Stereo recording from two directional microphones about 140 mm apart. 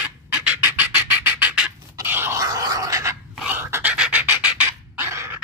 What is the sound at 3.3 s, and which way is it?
Pant, 15° right (ahead or behind).